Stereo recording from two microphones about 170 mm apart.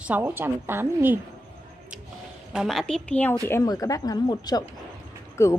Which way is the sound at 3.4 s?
20° left (ahead or behind).